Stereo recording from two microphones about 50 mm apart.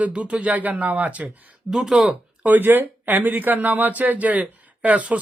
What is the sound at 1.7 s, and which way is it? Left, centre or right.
Speech, centre.